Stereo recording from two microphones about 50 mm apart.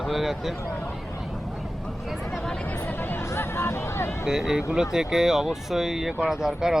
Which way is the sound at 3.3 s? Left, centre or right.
Left.